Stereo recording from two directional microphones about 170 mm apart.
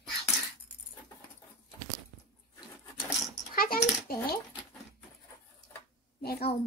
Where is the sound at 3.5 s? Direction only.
60° left (ahead or behind).